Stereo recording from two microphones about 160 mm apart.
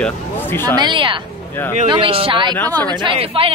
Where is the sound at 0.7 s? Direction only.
30° right (ahead or behind).